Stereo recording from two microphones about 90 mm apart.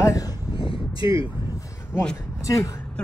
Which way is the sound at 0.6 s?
75° left (ahead or behind).